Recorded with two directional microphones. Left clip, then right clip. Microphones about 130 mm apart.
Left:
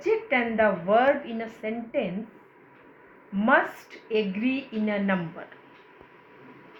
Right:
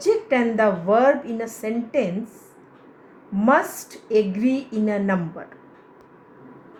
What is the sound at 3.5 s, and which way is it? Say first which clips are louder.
A woman's voice: right 3 dB; 90° right.